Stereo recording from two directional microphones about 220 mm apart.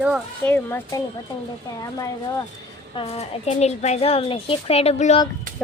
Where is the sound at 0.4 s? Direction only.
10° left (ahead or behind).